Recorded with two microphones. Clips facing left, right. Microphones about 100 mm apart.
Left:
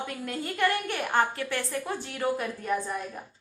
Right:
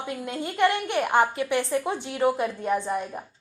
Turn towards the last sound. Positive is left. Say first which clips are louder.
# right 4 dB
turn(degrees=-25)  # may be behind; listen again after turning